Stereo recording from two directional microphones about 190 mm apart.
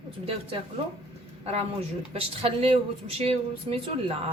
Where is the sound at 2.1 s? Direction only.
30° right (ahead or behind).